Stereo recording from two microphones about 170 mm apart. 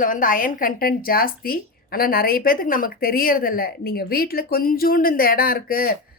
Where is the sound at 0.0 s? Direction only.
55° left (ahead or behind).